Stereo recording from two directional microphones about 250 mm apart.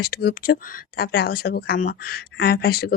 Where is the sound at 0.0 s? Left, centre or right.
Left.